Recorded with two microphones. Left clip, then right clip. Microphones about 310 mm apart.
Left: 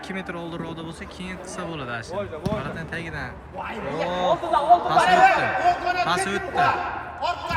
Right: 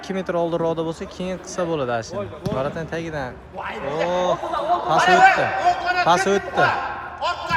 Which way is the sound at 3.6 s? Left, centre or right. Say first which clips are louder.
Right 4 dB; right.